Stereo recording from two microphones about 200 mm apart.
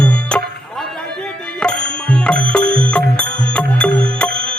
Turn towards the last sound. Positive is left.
turn(degrees=5)  # may be behind; listen again after turning